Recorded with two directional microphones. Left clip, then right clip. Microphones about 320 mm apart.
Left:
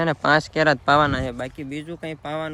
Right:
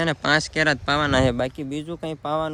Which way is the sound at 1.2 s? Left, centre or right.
Right.